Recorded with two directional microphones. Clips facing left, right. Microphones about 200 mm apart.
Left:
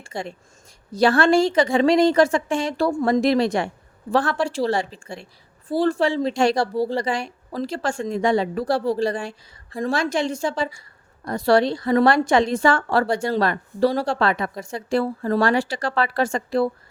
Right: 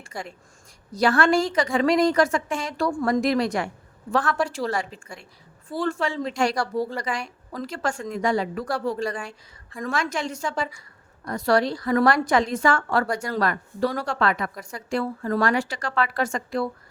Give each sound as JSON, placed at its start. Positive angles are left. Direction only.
{"t": 0.0, "sound": "a woman's voice", "side_deg": 25}